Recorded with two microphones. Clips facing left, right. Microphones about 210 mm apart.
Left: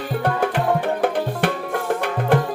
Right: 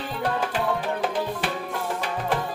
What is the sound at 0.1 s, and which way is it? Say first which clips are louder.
Music: left 6 dB; 55° left (ahead or behind).